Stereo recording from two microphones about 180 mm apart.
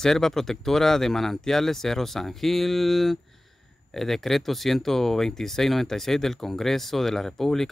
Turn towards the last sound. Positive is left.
turn(degrees=0)  # may be behind; listen again after turning